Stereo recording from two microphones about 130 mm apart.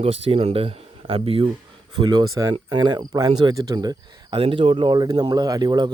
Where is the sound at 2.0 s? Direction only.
35° right (ahead or behind).